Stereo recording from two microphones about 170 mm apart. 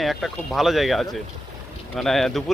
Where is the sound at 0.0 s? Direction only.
Centre (ahead or behind).